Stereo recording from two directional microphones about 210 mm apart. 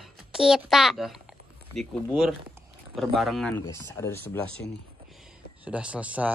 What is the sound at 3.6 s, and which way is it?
Speech, 15° left (ahead or behind).